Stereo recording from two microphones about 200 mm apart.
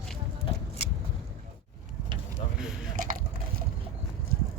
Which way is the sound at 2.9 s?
45° right (ahead or behind).